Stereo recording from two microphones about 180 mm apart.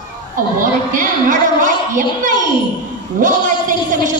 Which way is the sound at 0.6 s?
45° right (ahead or behind).